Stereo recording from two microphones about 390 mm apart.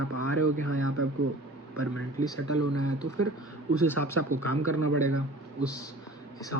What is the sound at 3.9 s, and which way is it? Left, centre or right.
Speech, right.